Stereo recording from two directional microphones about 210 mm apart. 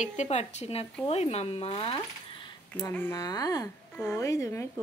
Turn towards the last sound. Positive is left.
turn(degrees=15)  # may be behind; listen again after turning